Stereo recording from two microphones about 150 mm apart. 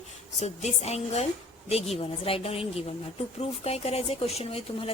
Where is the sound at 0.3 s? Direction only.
45° left (ahead or behind).